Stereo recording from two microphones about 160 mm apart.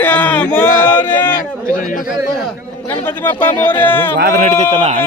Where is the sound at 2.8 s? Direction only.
15° left (ahead or behind).